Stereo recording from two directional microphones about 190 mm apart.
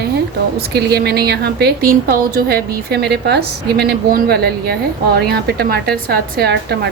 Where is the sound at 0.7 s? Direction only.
60° right (ahead or behind).